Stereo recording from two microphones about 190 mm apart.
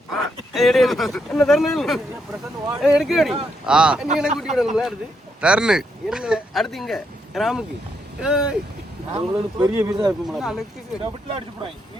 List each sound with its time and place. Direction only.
0.5 s speech: centre (ahead or behind)
9.1 s speech: 20° right (ahead or behind)
10.2 s speech: centre (ahead or behind)
11.0 s speech: 25° right (ahead or behind)